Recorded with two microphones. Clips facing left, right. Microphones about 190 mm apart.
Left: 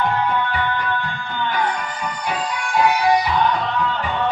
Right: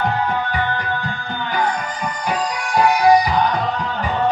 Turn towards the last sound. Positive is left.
turn(degrees=-40)  # may be behind; listen again after turning